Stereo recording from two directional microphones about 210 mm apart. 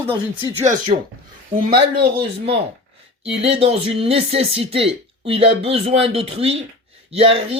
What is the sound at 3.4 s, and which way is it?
Speech, 30° right (ahead or behind).